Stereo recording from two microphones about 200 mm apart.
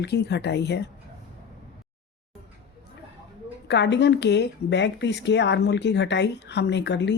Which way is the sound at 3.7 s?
60° left (ahead or behind).